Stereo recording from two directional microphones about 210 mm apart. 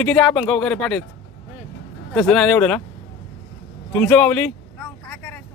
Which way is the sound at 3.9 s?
5° left (ahead or behind).